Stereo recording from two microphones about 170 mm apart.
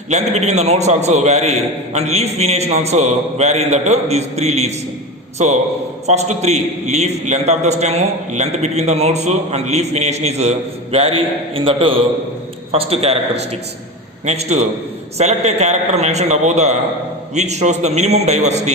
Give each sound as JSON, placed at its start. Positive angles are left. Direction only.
{"t": 0.1, "sound": "a man's voice", "side_deg": -40}